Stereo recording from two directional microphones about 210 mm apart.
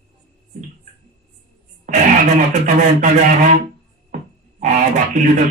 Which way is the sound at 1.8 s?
40° right (ahead or behind).